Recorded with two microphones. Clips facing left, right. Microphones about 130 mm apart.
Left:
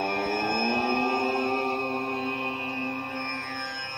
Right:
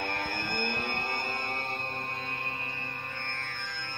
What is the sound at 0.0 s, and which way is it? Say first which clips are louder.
Music: left 7 dB; 30° left (ahead or behind).